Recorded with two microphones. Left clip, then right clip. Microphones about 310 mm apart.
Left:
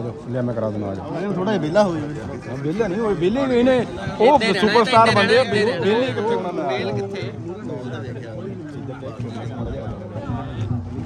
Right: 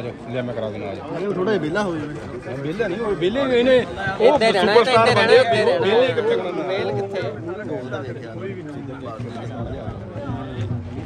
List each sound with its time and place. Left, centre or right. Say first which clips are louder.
1.4 s a man's voice: left 4 dB; left
4.2 s speech: even; centre